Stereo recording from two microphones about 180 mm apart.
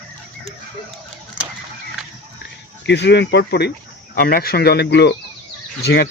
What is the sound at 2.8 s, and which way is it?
Speech, 75° left (ahead or behind).